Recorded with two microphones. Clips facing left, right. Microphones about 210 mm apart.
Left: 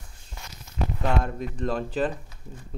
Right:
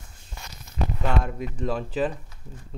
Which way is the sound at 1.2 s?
5° right (ahead or behind).